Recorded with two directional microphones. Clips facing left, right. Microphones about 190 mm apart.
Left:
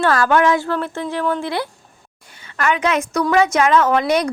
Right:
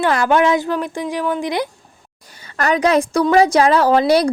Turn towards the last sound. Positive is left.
turn(degrees=-30)  # may be behind; listen again after turning